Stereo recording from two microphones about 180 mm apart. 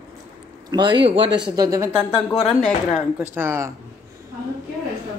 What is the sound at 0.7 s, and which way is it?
Speech, 25° right (ahead or behind).